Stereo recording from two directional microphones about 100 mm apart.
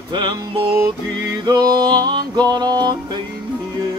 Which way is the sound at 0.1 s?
45° right (ahead or behind).